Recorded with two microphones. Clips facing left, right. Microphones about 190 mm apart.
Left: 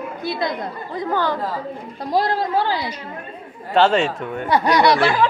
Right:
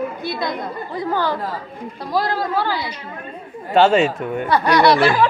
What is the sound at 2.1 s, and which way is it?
Speech, 20° left (ahead or behind).